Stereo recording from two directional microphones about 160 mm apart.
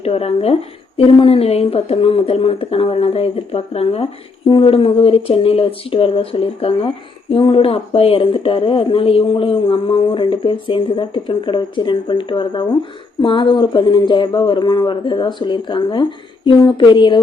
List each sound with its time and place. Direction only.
0.0 s speech: 40° left (ahead or behind)